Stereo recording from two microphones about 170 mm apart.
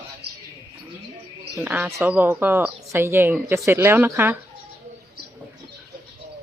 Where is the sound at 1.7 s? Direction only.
10° right (ahead or behind).